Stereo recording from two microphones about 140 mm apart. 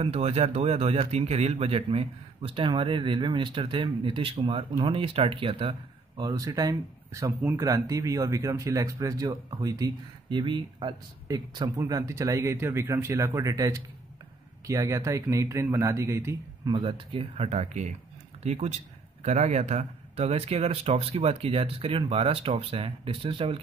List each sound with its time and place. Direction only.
0.0 s speech: 45° right (ahead or behind); by 16.3 s 20° right (ahead or behind)
16.6 s speech: 35° right (ahead or behind)